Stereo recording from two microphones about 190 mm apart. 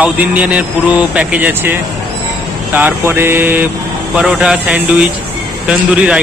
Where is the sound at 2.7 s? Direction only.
10° right (ahead or behind).